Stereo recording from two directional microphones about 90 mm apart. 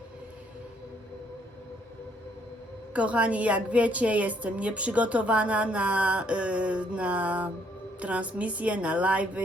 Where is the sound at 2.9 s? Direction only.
15° right (ahead or behind).